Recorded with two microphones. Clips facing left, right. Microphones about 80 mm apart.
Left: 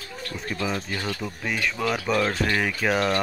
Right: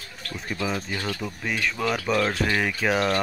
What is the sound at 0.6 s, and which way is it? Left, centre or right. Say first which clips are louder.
Speech: even; centre.